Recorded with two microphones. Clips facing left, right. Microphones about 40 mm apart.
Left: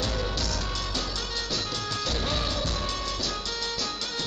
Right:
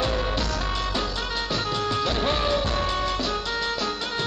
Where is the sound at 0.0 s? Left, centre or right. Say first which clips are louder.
Right 5 dB; right.